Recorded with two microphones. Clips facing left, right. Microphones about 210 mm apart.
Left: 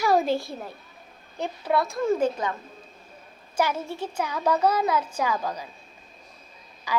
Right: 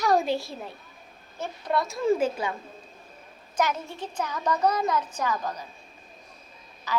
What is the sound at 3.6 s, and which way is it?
A child's voice, 10° left (ahead or behind).